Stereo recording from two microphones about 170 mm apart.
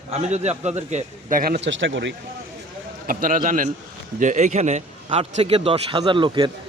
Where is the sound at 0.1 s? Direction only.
40° right (ahead or behind); by 2.1 s 90° right.